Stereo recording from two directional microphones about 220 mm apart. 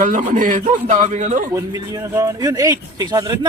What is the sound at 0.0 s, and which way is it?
A man's voice, 35° right (ahead or behind).